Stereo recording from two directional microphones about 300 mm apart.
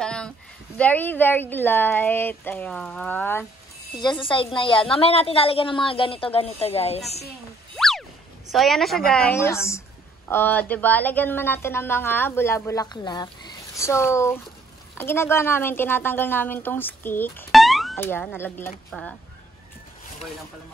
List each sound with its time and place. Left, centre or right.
0.0 s a sound: centre
0.7 s a woman's voice: centre
7.7 s boing: centre
8.5 s a woman's voice: centre